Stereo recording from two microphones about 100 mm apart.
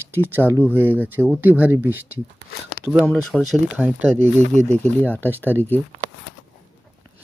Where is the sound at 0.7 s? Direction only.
20° right (ahead or behind).